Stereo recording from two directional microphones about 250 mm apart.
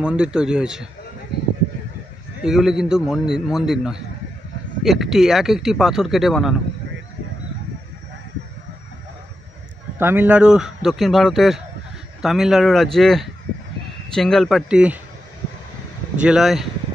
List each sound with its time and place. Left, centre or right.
0.0 s a man's voice: centre
2.4 s a man's voice: centre
9.9 s a man's voice: centre
16.2 s a man's voice: centre